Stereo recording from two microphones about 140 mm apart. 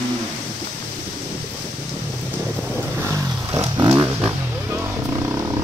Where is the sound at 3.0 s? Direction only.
20° right (ahead or behind).